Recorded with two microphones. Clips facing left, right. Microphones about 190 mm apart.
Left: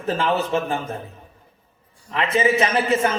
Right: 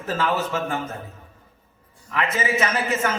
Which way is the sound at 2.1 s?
25° left (ahead or behind).